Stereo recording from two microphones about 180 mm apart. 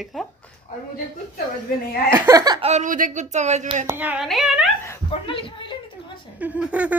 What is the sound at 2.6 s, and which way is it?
Speech, 40° right (ahead or behind).